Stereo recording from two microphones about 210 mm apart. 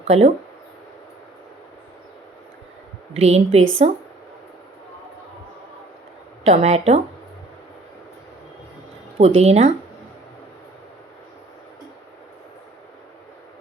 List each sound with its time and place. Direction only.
0.0 s speech: 30° right (ahead or behind)
3.2 s speech: 30° right (ahead or behind)
6.4 s speech: 30° right (ahead or behind)
9.1 s speech: 30° right (ahead or behind)